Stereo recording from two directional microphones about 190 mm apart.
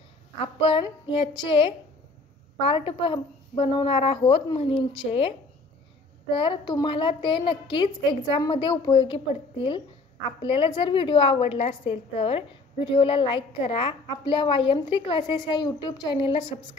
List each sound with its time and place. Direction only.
0.6 s a woman's voice: 30° left (ahead or behind)
6.3 s a woman's voice: 25° left (ahead or behind)